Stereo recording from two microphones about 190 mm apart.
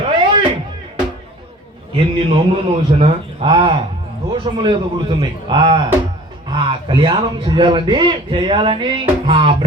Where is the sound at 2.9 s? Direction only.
30° right (ahead or behind).